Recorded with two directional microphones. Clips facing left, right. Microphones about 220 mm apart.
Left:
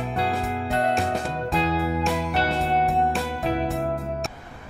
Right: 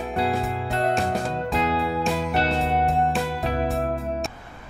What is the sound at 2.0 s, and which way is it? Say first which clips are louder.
Music: right 1 dB; centre (ahead or behind).